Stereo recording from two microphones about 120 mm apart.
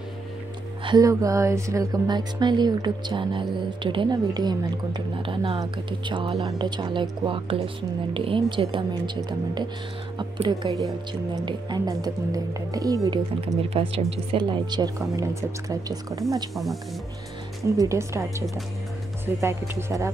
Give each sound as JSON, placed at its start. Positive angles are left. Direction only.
{"t": 0.8, "sound": "music", "side_deg": -35}
{"t": 5.6, "sound": "speech", "side_deg": -40}
{"t": 10.1, "sound": "music", "side_deg": -40}
{"t": 11.4, "sound": "speech", "side_deg": -35}
{"t": 13.6, "sound": "speech", "side_deg": -50}
{"t": 14.1, "sound": "music", "side_deg": -40}
{"t": 15.7, "sound": "speech", "side_deg": -30}
{"t": 17.7, "sound": "speech", "side_deg": -25}